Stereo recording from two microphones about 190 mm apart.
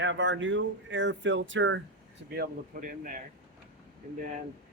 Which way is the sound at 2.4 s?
45° right (ahead or behind).